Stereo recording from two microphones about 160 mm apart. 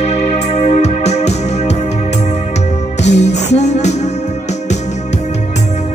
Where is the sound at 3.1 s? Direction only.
45° left (ahead or behind).